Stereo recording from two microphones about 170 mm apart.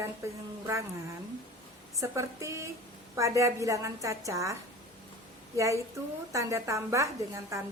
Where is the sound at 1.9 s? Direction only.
20° right (ahead or behind).